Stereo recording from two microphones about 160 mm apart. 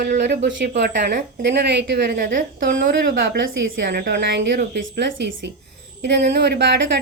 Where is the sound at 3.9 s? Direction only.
90° right.